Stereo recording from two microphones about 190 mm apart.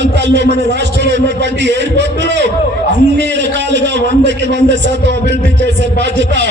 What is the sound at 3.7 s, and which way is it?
A man's voice, 65° right (ahead or behind).